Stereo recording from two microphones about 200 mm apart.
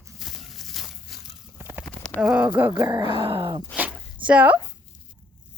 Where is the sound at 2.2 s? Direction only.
5° right (ahead or behind); by 3.6 s 25° right (ahead or behind).